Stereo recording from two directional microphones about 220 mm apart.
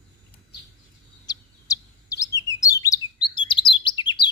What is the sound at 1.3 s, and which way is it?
Bird, 15° left (ahead or behind).